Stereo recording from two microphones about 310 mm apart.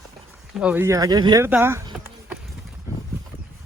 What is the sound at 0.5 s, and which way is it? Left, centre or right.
Speech, centre.